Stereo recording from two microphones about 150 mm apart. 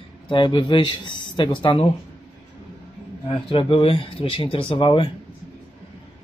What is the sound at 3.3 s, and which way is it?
Speech, 35° left (ahead or behind).